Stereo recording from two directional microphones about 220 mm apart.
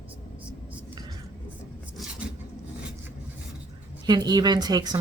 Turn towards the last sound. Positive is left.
turn(degrees=-20)  # may be behind; listen again after turning